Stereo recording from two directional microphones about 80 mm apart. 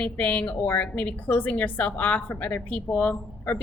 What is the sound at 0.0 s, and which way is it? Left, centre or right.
A woman's voice, centre.